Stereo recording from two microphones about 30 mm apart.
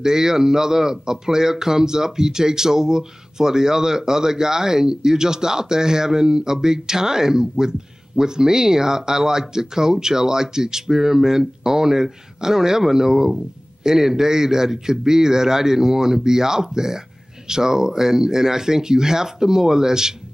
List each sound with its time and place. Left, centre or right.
0.0 s a man's voice: centre